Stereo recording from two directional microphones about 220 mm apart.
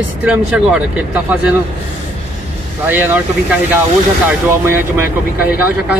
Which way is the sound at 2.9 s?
10° right (ahead or behind).